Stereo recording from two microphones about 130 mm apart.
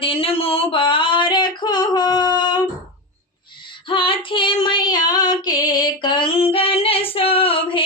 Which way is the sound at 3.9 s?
40° left (ahead or behind).